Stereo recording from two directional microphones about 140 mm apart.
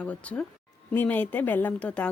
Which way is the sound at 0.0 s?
10° left (ahead or behind).